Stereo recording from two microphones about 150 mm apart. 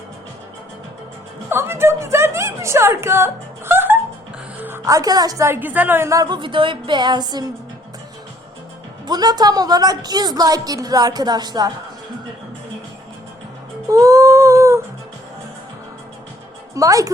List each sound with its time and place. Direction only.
1.5 s a sound: 15° right (ahead or behind)
4.6 s a woman's voice: 20° right (ahead or behind)
9.0 s a woman's voice: 25° right (ahead or behind)
13.9 s humming: 20° right (ahead or behind)
16.7 s a woman's voice: 20° right (ahead or behind)